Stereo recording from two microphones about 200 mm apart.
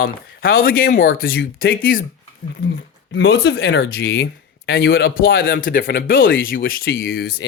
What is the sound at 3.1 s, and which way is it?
Speech, 65° left (ahead or behind).